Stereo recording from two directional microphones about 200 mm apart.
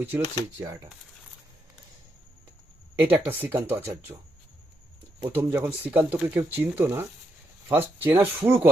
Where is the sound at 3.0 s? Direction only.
10° right (ahead or behind).